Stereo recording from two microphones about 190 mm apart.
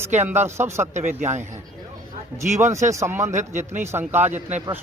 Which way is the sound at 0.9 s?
40° right (ahead or behind).